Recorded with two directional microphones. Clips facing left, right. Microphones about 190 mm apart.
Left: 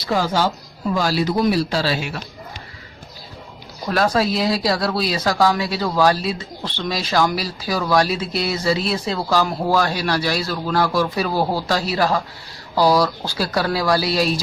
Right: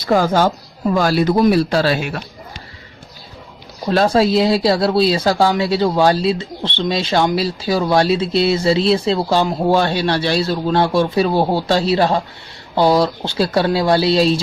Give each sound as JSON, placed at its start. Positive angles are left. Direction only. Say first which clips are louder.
{"t": 0.0, "sound": "speech", "louder": "right 5 dB", "side_deg": -50}
{"t": 3.8, "sound": "speech", "louder": "right 5 dB", "side_deg": -30}